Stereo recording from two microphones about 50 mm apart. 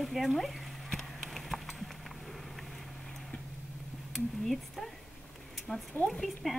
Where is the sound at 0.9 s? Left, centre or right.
Centre.